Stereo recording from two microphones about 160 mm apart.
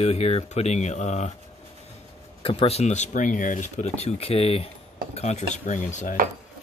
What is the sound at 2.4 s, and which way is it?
Speech, 35° left (ahead or behind).